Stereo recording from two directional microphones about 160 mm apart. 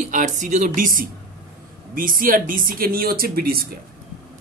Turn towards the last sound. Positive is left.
turn(degrees=-70)  # may be behind; listen again after turning